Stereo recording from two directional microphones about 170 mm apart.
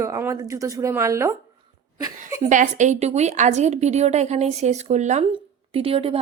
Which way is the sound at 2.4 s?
45° right (ahead or behind).